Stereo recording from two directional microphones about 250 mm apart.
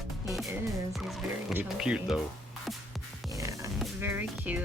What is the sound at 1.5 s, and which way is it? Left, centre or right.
Speech, centre.